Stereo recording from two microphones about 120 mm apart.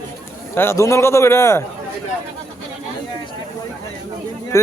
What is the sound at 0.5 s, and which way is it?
A man's voice, 20° left (ahead or behind).